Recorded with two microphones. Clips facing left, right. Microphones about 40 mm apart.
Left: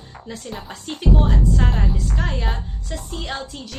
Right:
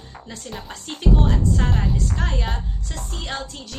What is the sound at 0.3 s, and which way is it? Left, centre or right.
A woman's voice, centre.